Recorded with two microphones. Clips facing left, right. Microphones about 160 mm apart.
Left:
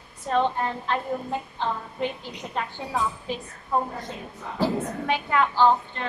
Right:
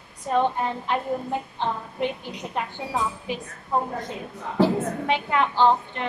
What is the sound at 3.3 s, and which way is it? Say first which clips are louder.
Speech: right 1 dB; 15° right (ahead or behind).